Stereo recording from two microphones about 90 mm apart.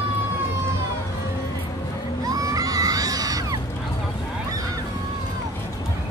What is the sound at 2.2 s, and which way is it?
Crowd, 40° right (ahead or behind).